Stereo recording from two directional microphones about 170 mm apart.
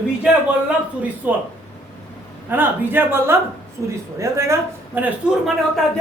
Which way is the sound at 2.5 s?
10° right (ahead or behind).